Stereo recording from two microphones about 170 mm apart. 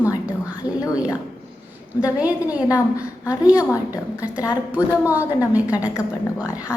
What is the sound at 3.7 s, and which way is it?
Speech, 20° left (ahead or behind).